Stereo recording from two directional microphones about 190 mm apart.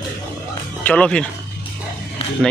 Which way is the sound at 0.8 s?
5° left (ahead or behind).